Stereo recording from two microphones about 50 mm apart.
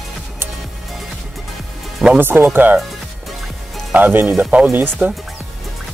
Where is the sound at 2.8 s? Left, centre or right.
Centre.